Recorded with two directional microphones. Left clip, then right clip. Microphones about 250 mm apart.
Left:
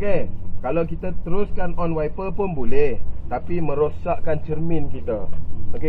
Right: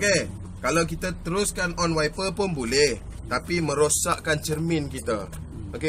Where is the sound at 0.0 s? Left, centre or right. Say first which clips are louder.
Right 1 dB; centre.